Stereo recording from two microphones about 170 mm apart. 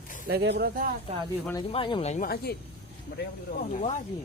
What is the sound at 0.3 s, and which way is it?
Speech, 70° right (ahead or behind).